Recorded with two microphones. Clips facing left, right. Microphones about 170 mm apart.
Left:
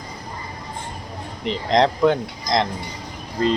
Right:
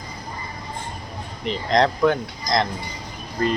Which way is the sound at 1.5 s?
20° left (ahead or behind).